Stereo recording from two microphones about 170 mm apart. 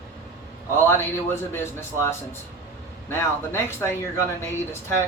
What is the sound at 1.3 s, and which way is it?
Speech, 15° left (ahead or behind).